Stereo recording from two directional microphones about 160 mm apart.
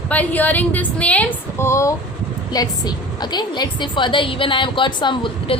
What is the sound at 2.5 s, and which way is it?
A woman's voice, 25° left (ahead or behind).